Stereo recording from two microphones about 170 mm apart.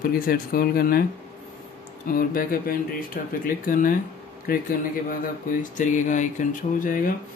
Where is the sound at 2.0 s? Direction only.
55° left (ahead or behind).